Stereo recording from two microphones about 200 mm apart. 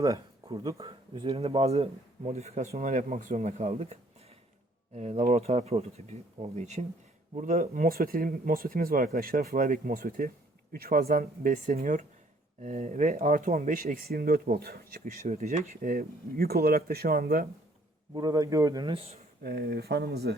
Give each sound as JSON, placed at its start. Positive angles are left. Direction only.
{"t": 0.0, "sound": "speech", "side_deg": -15}
{"t": 4.9, "sound": "speech", "side_deg": -35}
{"t": 18.1, "sound": "speech", "side_deg": -20}
{"t": 19.4, "sound": "speech", "side_deg": -50}